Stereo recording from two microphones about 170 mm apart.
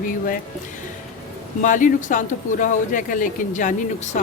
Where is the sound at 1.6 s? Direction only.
50° left (ahead or behind).